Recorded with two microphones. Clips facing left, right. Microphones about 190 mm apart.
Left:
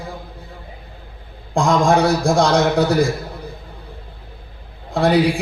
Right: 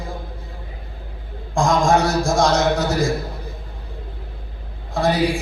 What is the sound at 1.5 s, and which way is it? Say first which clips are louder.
A man's voice: left 2 dB; 60° left (ahead or behind).